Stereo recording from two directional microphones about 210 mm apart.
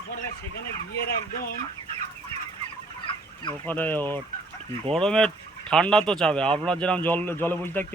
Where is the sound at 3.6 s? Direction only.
10° left (ahead or behind).